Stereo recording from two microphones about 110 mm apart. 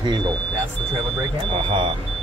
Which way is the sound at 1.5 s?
50° right (ahead or behind).